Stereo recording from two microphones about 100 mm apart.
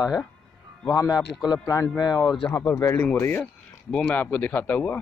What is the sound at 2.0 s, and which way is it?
Speech, 45° left (ahead or behind).